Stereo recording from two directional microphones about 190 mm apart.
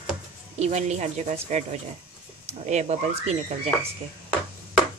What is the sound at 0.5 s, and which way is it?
Speech, 35° right (ahead or behind).